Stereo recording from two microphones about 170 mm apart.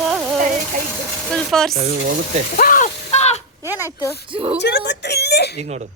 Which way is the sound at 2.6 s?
55° left (ahead or behind).